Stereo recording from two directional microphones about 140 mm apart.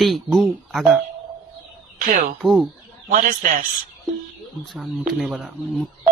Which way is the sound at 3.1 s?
80° right.